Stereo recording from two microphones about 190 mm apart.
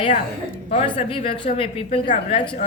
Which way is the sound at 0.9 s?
30° left (ahead or behind).